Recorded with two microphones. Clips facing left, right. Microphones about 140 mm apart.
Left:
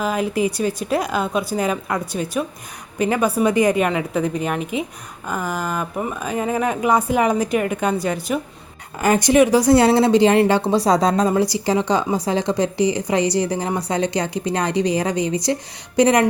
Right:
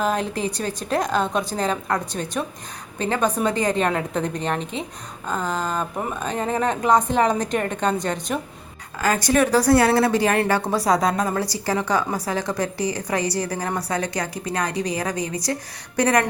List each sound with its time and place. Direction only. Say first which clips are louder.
0.0 s speech: left 3 dB; 5° left (ahead or behind)
9.0 s a woman's voice: left 5 dB; 20° left (ahead or behind)